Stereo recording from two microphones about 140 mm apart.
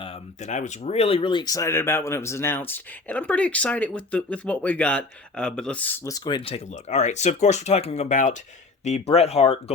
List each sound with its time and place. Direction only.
0.0 s speech: 50° left (ahead or behind); by 6.0 s 10° left (ahead or behind)
6.1 s speech: 30° left (ahead or behind); by 8.4 s 60° left (ahead or behind)
8.8 s speech: 50° left (ahead or behind)